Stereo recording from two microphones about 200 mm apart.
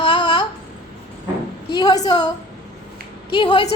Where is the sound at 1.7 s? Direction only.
20° left (ahead or behind).